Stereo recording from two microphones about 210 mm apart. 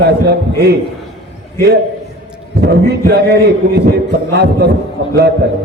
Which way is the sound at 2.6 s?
50° right (ahead or behind).